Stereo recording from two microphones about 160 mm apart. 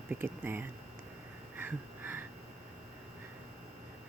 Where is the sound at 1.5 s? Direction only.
10° right (ahead or behind).